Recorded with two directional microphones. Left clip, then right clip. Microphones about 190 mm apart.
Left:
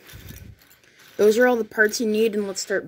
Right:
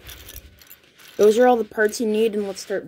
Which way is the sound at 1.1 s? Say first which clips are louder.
Right 2 dB; 10° right (ahead or behind).